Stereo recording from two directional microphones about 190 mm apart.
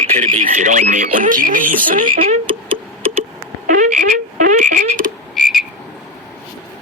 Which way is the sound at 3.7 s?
45° right (ahead or behind).